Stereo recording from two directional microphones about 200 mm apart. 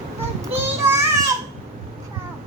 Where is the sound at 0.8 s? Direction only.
10° right (ahead or behind).